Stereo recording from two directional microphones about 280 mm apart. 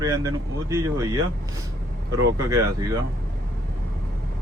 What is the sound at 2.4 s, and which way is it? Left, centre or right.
Speech, centre.